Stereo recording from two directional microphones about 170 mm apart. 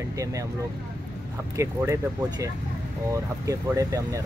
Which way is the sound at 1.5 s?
15° right (ahead or behind).